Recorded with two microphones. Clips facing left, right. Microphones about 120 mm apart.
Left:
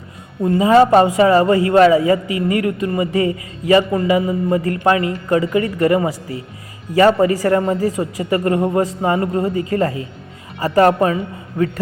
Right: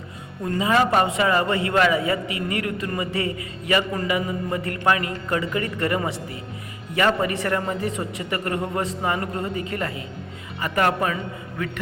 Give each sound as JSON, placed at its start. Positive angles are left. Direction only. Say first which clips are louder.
{"t": 0.4, "sound": "a man's voice", "louder": "left 9 dB", "side_deg": 25}